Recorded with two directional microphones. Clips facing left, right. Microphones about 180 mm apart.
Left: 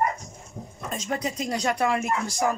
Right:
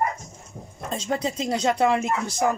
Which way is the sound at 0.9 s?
30° right (ahead or behind).